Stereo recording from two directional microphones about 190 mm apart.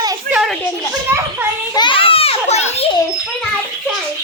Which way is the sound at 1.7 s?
25° left (ahead or behind).